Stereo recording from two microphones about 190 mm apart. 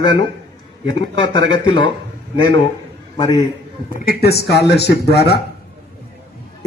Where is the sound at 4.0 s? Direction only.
55° left (ahead or behind).